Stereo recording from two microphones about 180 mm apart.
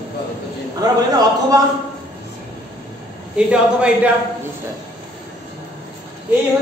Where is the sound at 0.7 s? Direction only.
20° right (ahead or behind).